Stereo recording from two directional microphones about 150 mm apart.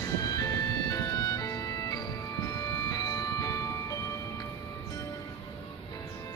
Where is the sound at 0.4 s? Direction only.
25° left (ahead or behind).